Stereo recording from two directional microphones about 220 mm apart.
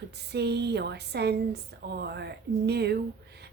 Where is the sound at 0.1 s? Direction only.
50° right (ahead or behind).